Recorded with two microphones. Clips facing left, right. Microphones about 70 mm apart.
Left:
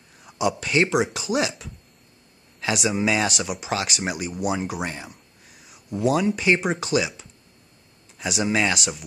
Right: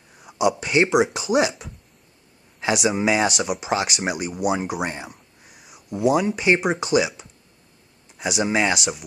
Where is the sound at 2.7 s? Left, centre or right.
Centre.